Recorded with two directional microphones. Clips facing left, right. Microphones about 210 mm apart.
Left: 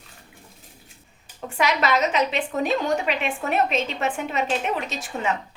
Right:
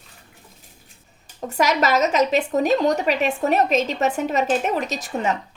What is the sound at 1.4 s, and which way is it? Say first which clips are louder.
A woman's voice: right 3 dB; 40° right (ahead or behind).